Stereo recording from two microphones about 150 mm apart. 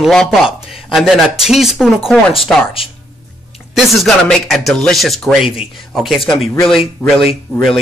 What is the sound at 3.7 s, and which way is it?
Speech, centre (ahead or behind).